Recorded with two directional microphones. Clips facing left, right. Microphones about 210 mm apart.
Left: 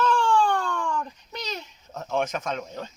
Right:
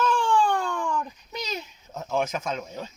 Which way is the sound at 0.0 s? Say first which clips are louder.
Left 1 dB; 5° right (ahead or behind).